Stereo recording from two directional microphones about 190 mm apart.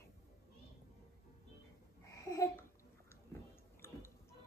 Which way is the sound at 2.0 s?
15° left (ahead or behind).